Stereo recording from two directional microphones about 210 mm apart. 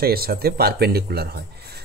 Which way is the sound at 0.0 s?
45° right (ahead or behind).